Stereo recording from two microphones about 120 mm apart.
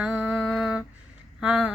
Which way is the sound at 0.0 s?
5° right (ahead or behind).